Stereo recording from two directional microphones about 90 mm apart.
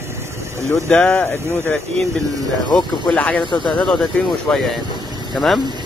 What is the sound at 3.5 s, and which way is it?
Speech, 60° left (ahead or behind).